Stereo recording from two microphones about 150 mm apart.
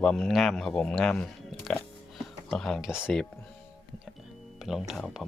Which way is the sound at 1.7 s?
5° left (ahead or behind).